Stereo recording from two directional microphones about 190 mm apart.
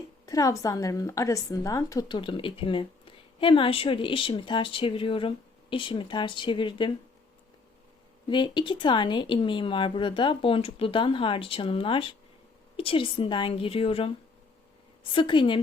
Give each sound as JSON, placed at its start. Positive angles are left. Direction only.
{"t": 0.3, "sound": "a woman's voice", "side_deg": 15}
{"t": 8.3, "sound": "speech", "side_deg": 25}
{"t": 15.1, "sound": "speech", "side_deg": 25}